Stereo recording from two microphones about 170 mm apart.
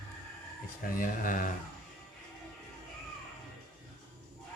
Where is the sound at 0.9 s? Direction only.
55° left (ahead or behind).